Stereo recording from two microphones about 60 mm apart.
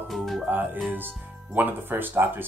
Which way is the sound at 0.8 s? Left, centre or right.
Right.